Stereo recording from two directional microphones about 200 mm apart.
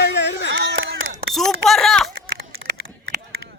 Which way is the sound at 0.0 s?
60° left (ahead or behind).